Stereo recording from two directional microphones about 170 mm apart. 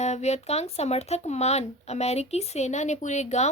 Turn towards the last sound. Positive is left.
turn(degrees=40)  # may be behind; listen again after turning